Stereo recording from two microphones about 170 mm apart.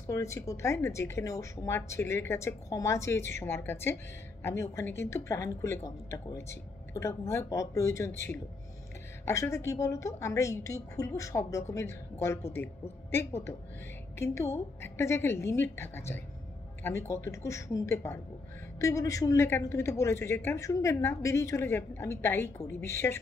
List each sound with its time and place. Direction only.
0.1 s speech: 15° left (ahead or behind)
9.2 s speech: 15° left (ahead or behind)